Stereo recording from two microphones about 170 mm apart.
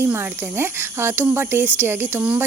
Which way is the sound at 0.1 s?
15° right (ahead or behind).